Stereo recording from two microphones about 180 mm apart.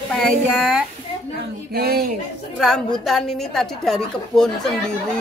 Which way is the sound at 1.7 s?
60° right (ahead or behind).